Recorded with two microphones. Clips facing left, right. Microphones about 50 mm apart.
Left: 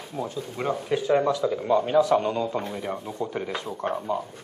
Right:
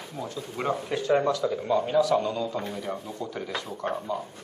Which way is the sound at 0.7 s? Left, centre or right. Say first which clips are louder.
Left 3 dB; centre.